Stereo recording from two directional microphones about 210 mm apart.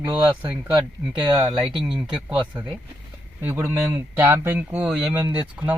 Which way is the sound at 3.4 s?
10° right (ahead or behind).